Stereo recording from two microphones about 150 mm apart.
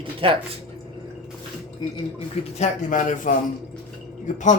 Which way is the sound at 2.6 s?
55° left (ahead or behind).